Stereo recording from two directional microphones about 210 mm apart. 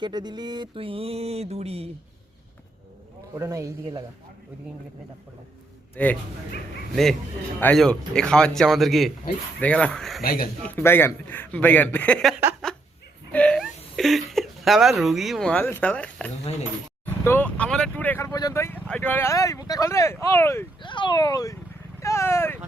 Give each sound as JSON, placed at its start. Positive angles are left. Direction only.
{"t": 0.0, "sound": "speech", "side_deg": -20}
{"t": 3.3, "sound": "speech", "side_deg": -15}
{"t": 6.0, "sound": "a man's voice", "side_deg": 5}
{"t": 10.2, "sound": "speech", "side_deg": 45}
{"t": 10.6, "sound": "speech", "side_deg": 10}